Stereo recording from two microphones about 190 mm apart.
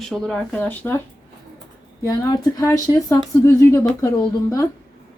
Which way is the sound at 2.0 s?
15° left (ahead or behind).